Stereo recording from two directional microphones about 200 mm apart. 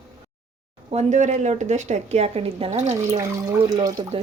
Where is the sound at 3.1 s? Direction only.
15° right (ahead or behind).